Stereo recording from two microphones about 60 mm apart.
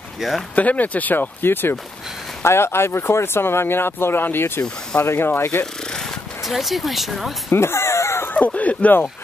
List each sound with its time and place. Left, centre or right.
0.2 s speech: centre
0.6 s speech: left
5.9 s speech: centre
7.5 s a sound: left
8.3 s speech: left